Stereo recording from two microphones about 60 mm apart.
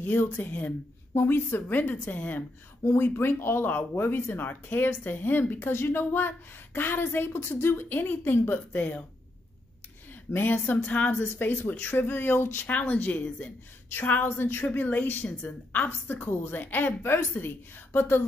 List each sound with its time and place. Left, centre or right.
0.0 s a woman's voice: left
1.1 s speech: left
2.8 s speech: left
10.3 s speech: left
10.7 s a woman's voice: left
12.6 s a woman's voice: left
14.7 s speech: left